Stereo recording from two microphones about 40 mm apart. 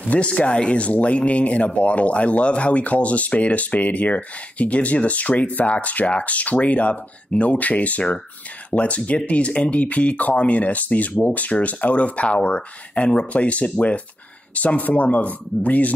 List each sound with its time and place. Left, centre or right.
0.0 s speech: left